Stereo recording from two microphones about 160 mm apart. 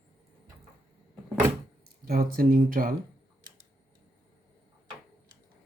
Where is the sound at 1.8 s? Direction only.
65° right (ahead or behind).